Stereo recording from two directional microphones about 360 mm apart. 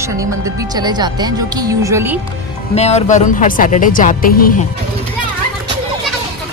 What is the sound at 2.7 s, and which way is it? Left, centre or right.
Speech, centre.